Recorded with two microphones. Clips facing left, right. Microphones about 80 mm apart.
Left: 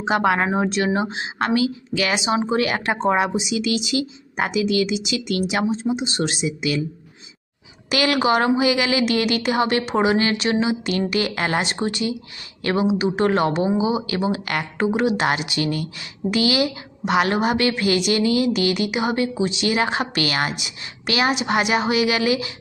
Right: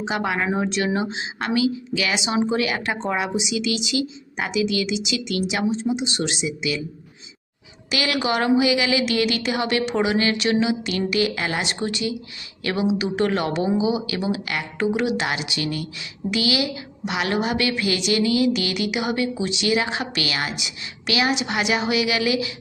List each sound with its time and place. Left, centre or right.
0.0 s a woman's voice: left
7.9 s a woman's voice: left